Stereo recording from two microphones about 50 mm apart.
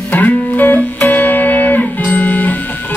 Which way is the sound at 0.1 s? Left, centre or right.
Left.